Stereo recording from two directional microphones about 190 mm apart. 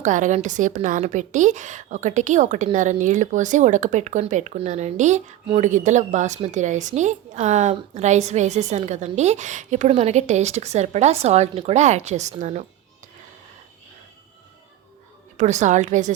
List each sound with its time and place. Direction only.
0.0 s a woman's voice: 40° right (ahead or behind)
15.4 s a woman's voice: 40° right (ahead or behind)